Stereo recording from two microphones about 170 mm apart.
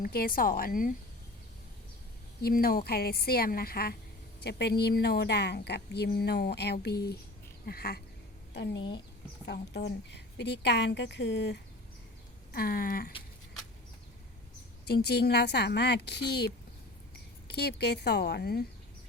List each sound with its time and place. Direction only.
0.0 s a woman's voice: 60° left (ahead or behind)
2.4 s a woman's voice: 60° left (ahead or behind)
4.4 s a woman's voice: 75° left (ahead or behind)
8.5 s a woman's voice: 85° left
12.5 s a woman's voice: 60° left (ahead or behind)
14.8 s a woman's voice: 70° left (ahead or behind)
17.5 s a woman's voice: 70° left (ahead or behind)